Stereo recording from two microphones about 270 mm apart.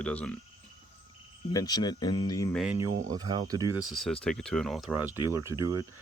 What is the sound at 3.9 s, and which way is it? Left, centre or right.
Speech, centre.